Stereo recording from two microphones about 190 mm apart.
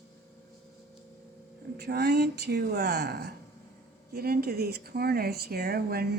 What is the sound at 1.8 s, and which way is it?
Speech, 55° right (ahead or behind).